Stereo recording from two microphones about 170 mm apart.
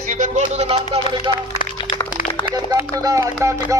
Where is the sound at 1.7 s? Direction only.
30° left (ahead or behind).